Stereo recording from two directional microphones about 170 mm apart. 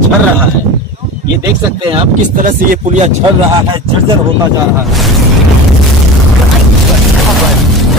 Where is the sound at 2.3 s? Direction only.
50° right (ahead or behind).